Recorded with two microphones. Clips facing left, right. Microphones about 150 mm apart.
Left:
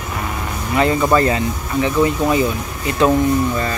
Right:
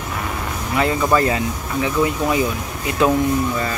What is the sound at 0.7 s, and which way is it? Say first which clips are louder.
Speech: left 3 dB; centre (ahead or behind).